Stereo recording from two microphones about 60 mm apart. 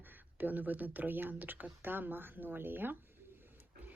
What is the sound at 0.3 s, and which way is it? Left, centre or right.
A woman's voice, right.